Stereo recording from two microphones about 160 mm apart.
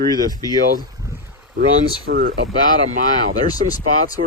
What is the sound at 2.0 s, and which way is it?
Speech, 70° right (ahead or behind).